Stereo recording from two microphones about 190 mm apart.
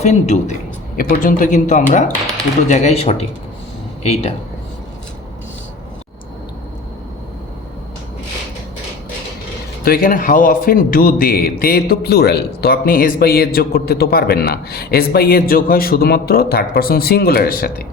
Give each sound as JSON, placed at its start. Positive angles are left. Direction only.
{"t": 0.0, "sound": "speech", "side_deg": 35}
{"t": 9.8, "sound": "a man's voice", "side_deg": 50}